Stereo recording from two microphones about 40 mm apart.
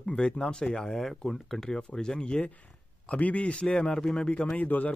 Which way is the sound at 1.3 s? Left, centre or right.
Centre.